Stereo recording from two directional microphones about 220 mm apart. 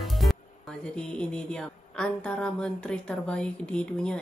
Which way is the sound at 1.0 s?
5° left (ahead or behind).